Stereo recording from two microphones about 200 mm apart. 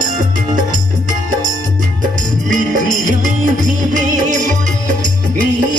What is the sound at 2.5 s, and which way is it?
Music, 40° right (ahead or behind).